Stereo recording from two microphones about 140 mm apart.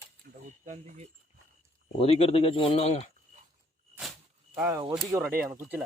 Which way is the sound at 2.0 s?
45° left (ahead or behind).